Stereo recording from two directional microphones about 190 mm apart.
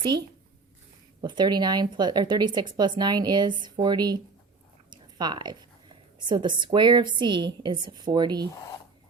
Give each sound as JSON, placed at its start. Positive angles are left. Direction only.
{"t": 0.0, "sound": "speech", "side_deg": -25}
{"t": 4.9, "sound": "a sound", "side_deg": -20}
{"t": 6.1, "sound": "speech", "side_deg": -25}